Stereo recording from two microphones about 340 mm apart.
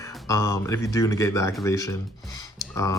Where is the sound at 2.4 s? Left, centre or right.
Centre.